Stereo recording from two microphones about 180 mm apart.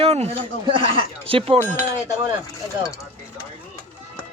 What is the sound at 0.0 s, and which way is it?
Speech, 35° right (ahead or behind).